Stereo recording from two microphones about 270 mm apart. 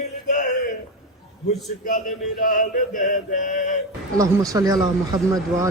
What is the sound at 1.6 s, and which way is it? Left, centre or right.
Male singing, left.